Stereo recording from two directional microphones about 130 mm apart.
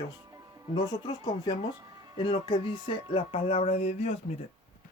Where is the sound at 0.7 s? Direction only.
35° left (ahead or behind); by 4.4 s 55° left (ahead or behind).